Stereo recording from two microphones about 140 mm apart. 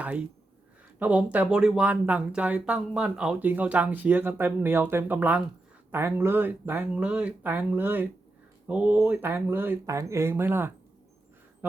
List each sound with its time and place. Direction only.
0.0 s speech: 10° right (ahead or behind)